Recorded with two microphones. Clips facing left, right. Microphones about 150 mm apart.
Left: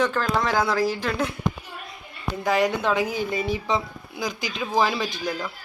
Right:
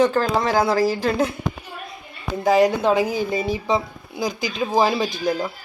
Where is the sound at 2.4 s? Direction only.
35° right (ahead or behind).